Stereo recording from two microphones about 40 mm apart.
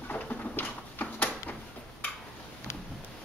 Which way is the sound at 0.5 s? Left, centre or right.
Left.